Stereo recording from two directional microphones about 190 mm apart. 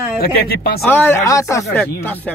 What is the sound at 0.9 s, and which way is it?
Speech, 10° left (ahead or behind).